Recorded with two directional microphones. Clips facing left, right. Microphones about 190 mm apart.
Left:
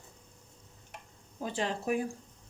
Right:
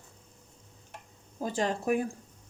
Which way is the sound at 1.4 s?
45° right (ahead or behind).